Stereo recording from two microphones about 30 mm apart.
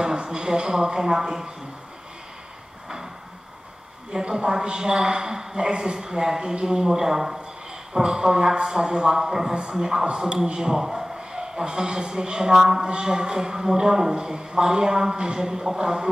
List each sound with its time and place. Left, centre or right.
0.0 s a woman's voice: right
4.1 s a woman's voice: centre